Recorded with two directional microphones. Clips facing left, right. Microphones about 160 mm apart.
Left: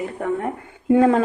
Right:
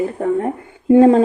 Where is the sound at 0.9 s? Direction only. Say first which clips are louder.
Right 6 dB; 30° right (ahead or behind).